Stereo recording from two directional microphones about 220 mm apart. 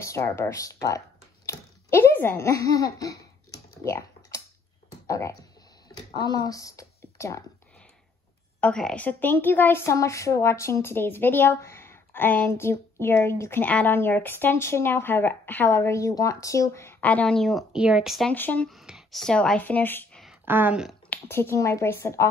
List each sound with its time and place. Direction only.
0.0 s a sound: 10° left (ahead or behind)
5.0 s speech: 15° left (ahead or behind)
8.5 s a woman's voice: 5° left (ahead or behind)
20.4 s a woman's voice: 10° right (ahead or behind)
21.1 s a woman's voice: 10° left (ahead or behind)